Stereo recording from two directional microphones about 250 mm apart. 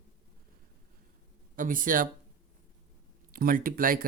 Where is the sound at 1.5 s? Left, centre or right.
Right.